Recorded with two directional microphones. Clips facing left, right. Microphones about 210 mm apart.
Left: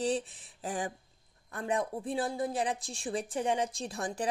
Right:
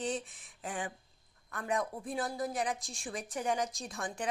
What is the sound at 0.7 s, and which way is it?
A woman's voice, 40° left (ahead or behind).